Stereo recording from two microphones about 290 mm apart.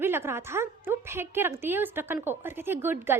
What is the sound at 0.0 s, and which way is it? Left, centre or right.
A woman's voice, centre.